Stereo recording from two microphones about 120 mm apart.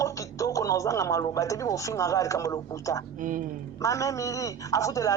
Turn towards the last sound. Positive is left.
turn(degrees=25)  # may be behind; listen again after turning